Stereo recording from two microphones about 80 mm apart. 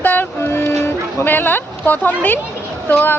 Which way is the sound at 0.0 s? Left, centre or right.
Left.